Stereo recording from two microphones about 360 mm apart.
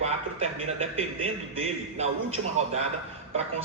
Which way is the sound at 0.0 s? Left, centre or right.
Centre.